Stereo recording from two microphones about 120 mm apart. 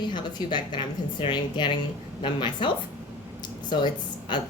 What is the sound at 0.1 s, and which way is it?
A woman's voice, 40° left (ahead or behind).